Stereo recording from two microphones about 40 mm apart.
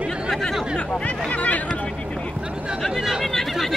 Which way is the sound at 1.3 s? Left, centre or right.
Left.